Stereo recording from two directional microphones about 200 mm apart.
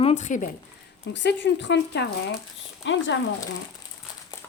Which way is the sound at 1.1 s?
60° left (ahead or behind).